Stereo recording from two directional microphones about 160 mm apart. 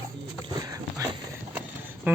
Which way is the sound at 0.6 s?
20° right (ahead or behind).